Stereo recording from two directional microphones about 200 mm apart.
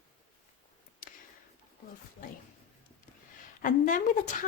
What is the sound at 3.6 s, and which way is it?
Speech, 40° left (ahead or behind).